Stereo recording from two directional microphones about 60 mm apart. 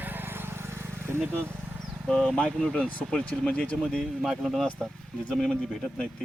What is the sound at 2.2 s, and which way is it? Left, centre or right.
Speech, left.